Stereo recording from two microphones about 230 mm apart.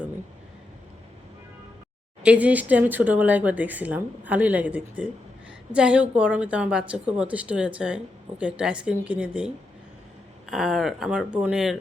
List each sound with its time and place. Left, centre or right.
2.2 s a woman's voice: centre